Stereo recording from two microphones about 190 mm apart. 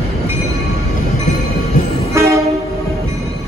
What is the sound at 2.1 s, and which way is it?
Train, 15° right (ahead or behind).